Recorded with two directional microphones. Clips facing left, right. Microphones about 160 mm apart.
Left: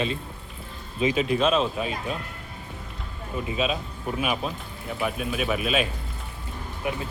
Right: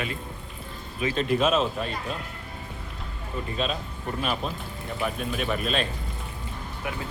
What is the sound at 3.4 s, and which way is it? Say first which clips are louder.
Speech: left 3 dB; 5° left (ahead or behind).